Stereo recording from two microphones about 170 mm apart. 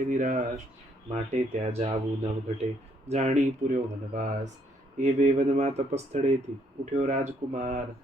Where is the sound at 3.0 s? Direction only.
40° right (ahead or behind).